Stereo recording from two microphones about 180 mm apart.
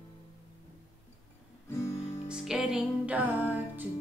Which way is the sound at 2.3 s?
5° right (ahead or behind).